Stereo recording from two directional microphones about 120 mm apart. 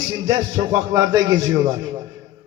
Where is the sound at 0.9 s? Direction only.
30° right (ahead or behind).